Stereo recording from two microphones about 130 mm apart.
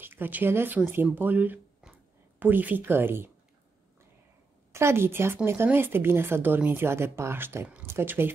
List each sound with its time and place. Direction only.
0.0 s speech: 15° right (ahead or behind)
4.7 s speech: 20° right (ahead or behind)